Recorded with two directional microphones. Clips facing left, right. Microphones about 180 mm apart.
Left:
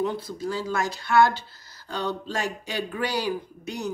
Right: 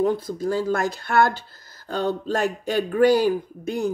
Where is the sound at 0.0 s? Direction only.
45° right (ahead or behind).